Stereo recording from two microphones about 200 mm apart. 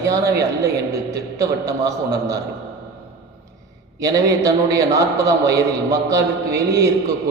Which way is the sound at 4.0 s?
15° right (ahead or behind).